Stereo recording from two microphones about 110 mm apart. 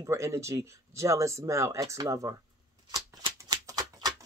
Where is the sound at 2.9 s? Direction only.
35° right (ahead or behind).